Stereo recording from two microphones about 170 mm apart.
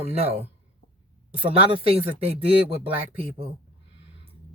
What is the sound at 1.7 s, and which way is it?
Speech, 35° right (ahead or behind).